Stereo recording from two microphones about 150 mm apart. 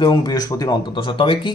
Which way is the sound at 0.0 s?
30° left (ahead or behind).